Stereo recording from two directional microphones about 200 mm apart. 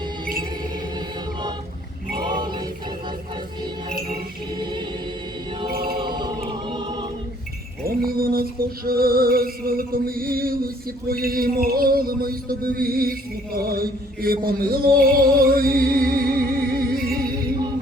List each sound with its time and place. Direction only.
0.9 s music: 20° right (ahead or behind)
5.6 s a capella: 50° right (ahead or behind)
6.1 s music: 20° right (ahead or behind)
7.9 s a sound: 50° right (ahead or behind)
14.9 s music: 45° right (ahead or behind)